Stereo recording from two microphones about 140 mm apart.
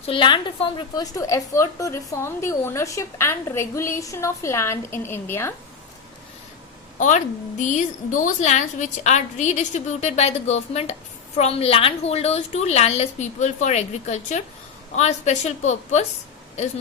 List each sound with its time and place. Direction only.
0.0 s a woman's voice: 40° left (ahead or behind); by 5.5 s 15° left (ahead or behind)
7.6 s a woman's voice: 60° left (ahead or behind)